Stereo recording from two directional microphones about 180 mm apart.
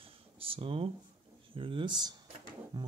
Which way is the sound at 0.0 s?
30° right (ahead or behind).